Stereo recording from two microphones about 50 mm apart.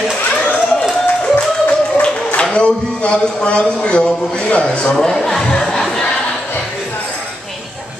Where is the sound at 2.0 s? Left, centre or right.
Centre.